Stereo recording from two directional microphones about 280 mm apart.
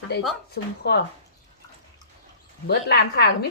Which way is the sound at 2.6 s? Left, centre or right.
Left.